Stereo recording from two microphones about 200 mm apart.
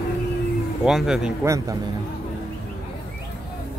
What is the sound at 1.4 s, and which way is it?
Speech, 15° right (ahead or behind).